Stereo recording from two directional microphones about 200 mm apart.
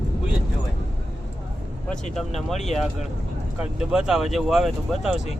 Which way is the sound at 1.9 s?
Centre (ahead or behind).